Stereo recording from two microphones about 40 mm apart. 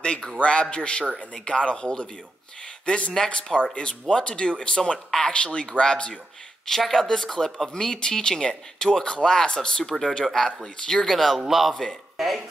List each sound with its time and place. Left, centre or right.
0.0 s a man's voice: left
6.8 s speech: centre
7.7 s a man's voice: centre